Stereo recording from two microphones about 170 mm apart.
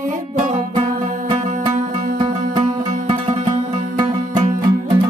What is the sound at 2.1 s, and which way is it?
Music, 25° right (ahead or behind).